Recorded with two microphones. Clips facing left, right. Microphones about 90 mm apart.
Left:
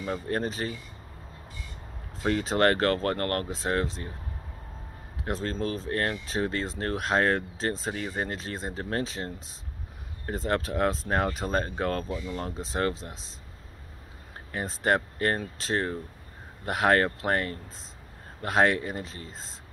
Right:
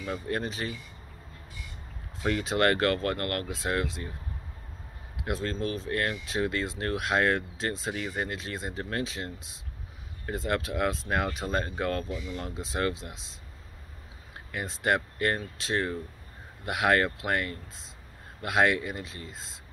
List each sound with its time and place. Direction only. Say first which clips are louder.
0.0 s speech: left 2 dB; 35° left (ahead or behind)
2.2 s speech: left 2 dB; 35° left (ahead or behind)
5.2 s speech: left 1 dB; 35° left (ahead or behind)
14.5 s speech: left 2 dB; 35° left (ahead or behind)